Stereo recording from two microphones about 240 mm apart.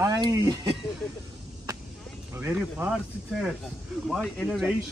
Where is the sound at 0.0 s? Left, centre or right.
Centre.